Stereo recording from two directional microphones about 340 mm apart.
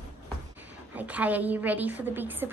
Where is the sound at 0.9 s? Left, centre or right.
Centre.